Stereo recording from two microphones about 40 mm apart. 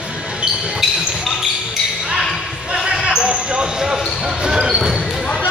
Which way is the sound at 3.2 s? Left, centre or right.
Right.